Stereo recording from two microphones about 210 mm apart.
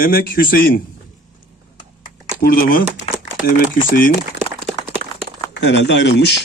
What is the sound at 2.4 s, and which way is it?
Speech, 45° left (ahead or behind).